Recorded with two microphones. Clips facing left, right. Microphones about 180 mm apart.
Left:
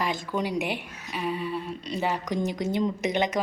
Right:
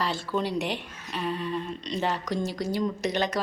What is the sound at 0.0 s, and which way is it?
Speech, 15° left (ahead or behind).